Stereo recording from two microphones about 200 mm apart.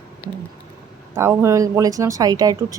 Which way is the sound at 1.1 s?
10° right (ahead or behind).